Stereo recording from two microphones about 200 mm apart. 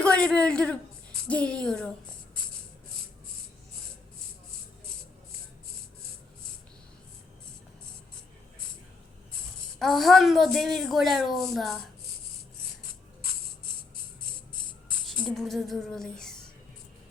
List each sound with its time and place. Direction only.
0.0 s a man's voice: 5° left (ahead or behind)
9.7 s speech: centre (ahead or behind)
14.5 s music: 20° left (ahead or behind)
15.0 s a sound: 5° left (ahead or behind)